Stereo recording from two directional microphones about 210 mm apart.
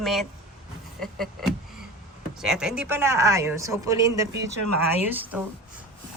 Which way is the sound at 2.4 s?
5° right (ahead or behind).